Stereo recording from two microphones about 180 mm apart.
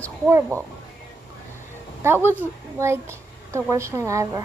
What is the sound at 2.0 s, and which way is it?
A woman's voice, 15° right (ahead or behind).